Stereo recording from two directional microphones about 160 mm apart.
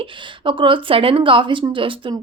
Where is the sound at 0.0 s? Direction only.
30° right (ahead or behind).